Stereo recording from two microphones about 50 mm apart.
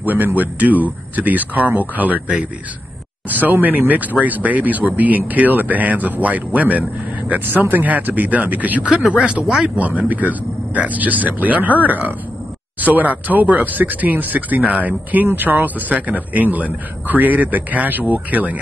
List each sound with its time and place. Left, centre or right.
0.0 s a man's voice: right; by 9.7 s centre
9.8 s a man's voice: right